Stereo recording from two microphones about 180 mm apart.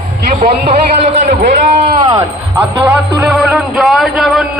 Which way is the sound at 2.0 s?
25° right (ahead or behind).